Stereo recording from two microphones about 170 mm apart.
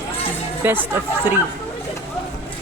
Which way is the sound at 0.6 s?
10° right (ahead or behind).